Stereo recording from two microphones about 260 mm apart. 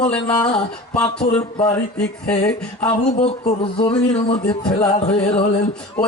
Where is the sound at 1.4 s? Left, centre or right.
Centre.